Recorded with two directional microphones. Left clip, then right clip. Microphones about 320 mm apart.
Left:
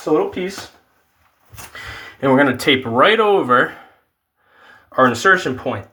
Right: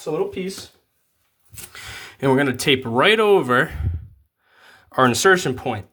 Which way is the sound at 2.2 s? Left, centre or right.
Right.